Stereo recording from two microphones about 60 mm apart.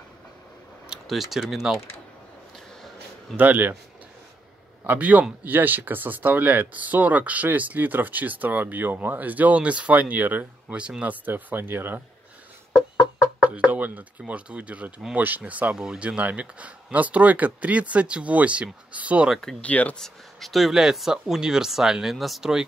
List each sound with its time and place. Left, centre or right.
1.0 s speech: centre
3.3 s speech: right
4.8 s speech: right
13.0 s speech: centre
15.8 s speech: centre
19.6 s speech: left
20.0 s speech: centre